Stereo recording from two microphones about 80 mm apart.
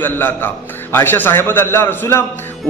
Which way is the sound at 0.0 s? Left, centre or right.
Left.